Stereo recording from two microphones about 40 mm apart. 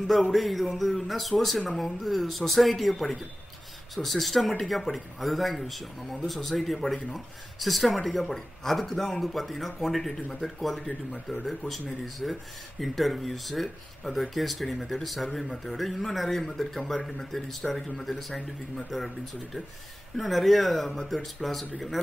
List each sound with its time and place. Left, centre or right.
0.0 s a man's voice: centre
18.9 s speech: centre